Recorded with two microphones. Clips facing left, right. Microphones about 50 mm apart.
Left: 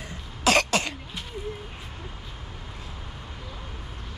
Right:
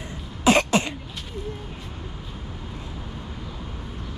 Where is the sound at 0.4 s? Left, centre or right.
Right.